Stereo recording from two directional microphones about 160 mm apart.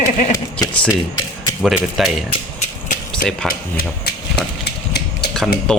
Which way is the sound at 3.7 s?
90° left.